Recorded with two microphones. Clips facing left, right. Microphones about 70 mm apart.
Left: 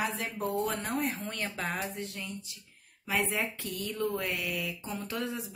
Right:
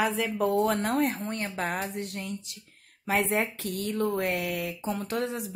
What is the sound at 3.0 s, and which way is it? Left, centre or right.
Speech, right.